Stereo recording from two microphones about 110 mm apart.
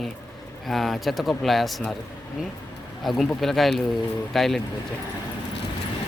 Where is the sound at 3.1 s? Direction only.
Centre (ahead or behind).